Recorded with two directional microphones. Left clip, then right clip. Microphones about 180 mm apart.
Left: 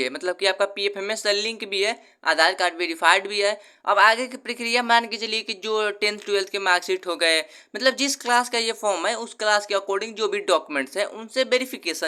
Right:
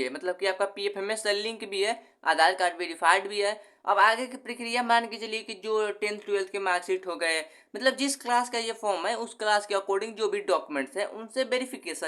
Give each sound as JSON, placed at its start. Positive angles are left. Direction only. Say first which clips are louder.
{"t": 0.0, "sound": "speech", "louder": "left 6 dB", "side_deg": 20}